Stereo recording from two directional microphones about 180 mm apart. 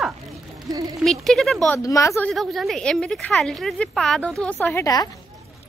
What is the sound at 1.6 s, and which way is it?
Speech, 15° left (ahead or behind).